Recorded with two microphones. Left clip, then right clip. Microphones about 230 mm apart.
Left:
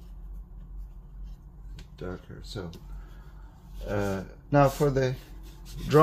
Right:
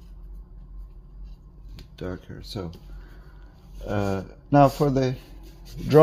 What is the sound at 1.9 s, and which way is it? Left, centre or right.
Speech, right.